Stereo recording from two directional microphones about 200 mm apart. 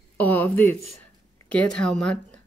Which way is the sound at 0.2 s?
10° left (ahead or behind).